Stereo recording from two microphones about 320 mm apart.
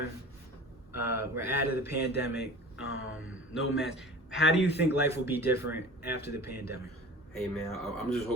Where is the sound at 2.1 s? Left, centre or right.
Left.